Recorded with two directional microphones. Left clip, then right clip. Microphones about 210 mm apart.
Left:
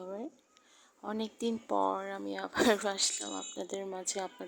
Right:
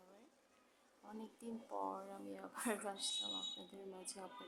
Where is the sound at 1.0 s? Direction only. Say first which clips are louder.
Left 18 dB; 45° left (ahead or behind).